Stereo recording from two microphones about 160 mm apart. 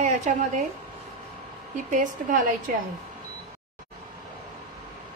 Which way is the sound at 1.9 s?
55° right (ahead or behind).